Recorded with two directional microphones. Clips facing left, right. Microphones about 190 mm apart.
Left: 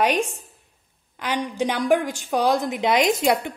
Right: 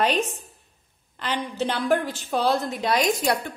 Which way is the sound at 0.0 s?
10° left (ahead or behind).